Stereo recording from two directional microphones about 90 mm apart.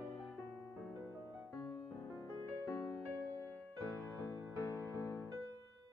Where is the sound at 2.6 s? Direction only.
30° left (ahead or behind).